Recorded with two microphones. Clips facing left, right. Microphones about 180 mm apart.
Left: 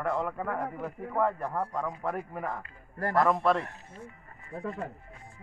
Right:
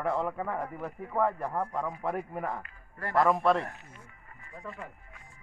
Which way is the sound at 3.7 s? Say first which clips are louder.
Left 6 dB; 30° left (ahead or behind).